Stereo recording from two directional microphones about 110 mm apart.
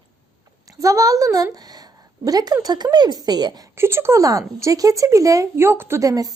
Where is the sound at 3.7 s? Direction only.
25° right (ahead or behind).